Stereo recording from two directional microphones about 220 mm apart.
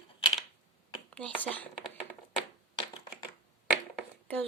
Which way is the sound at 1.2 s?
5° left (ahead or behind).